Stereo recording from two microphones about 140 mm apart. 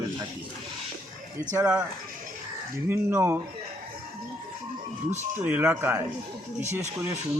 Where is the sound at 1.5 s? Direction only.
10° right (ahead or behind).